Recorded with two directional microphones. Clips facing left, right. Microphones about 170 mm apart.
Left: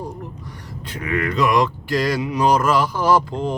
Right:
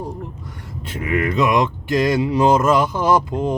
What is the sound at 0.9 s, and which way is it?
Speech, 25° right (ahead or behind).